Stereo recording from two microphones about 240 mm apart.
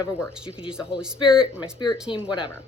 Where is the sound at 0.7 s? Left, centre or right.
Centre.